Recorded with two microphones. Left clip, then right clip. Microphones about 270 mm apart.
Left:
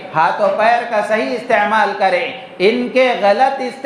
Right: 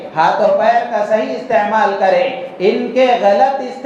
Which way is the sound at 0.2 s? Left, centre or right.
Left.